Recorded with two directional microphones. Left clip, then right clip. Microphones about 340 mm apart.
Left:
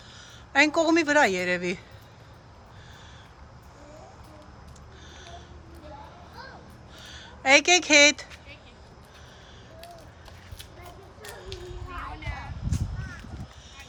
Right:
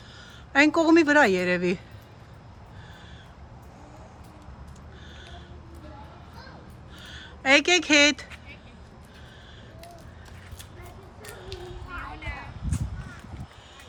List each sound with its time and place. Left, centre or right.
0.5 s a woman's voice: centre
7.0 s bleat: centre
11.2 s a sound: left
11.9 s music: left